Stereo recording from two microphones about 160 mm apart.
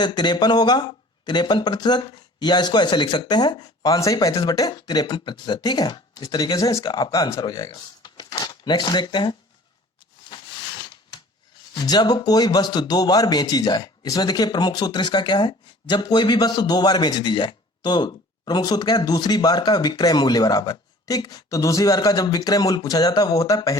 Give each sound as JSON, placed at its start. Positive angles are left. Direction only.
{"t": 0.0, "sound": "speech", "side_deg": 25}
{"t": 10.2, "sound": "a sound", "side_deg": 25}
{"t": 11.7, "sound": "speech", "side_deg": 25}